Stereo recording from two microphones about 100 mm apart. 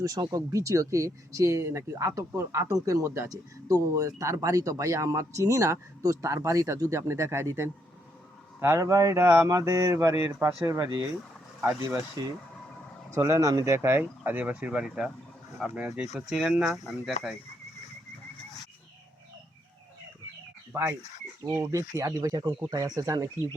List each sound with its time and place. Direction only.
0.0 s speech: 40° right (ahead or behind)
9.2 s speech: 20° right (ahead or behind)
9.5 s speech: 35° right (ahead or behind)
13.1 s speech: 30° right (ahead or behind)
14.0 s speech: 15° right (ahead or behind)
16.1 s speech: 10° right (ahead or behind)
16.7 s speech: centre (ahead or behind)
21.5 s speech: 35° right (ahead or behind)